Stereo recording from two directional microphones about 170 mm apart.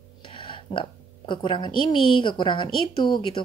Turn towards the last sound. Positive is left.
turn(degrees=30)  # may be behind; listen again after turning